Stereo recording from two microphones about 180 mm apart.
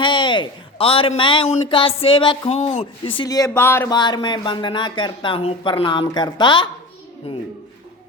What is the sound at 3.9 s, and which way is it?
Speech, 25° left (ahead or behind).